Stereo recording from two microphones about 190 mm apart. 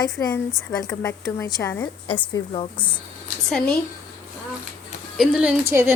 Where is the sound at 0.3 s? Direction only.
5° left (ahead or behind).